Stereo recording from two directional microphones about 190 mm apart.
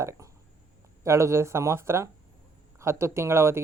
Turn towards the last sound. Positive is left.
turn(degrees=-15)  # may be behind; listen again after turning